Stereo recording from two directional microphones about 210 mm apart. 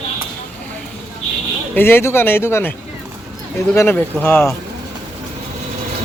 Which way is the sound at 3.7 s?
10° left (ahead or behind).